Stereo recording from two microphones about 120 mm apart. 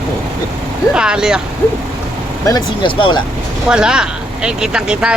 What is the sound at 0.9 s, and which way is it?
Speech, 5° right (ahead or behind).